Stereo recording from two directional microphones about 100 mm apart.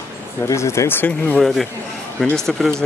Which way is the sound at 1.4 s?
Centre (ahead or behind).